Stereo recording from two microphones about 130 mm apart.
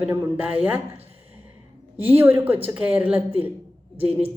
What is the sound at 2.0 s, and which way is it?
A woman's voice, 15° right (ahead or behind).